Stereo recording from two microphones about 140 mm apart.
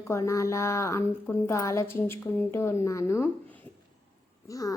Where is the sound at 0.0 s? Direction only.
20° left (ahead or behind).